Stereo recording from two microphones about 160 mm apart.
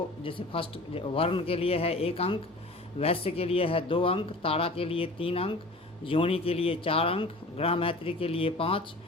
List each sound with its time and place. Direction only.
0.2 s speech: 35° left (ahead or behind)